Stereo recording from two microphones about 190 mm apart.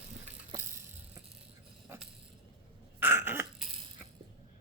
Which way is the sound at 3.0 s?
10° right (ahead or behind).